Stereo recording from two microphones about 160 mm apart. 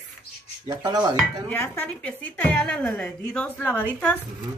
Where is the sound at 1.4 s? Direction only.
15° left (ahead or behind).